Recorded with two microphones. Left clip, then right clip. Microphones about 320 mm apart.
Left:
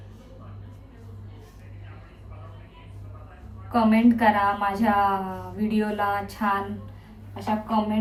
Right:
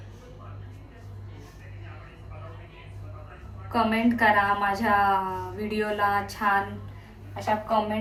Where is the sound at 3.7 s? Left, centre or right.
Centre.